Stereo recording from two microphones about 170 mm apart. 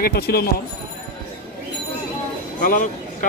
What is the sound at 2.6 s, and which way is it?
Speech, 50° left (ahead or behind).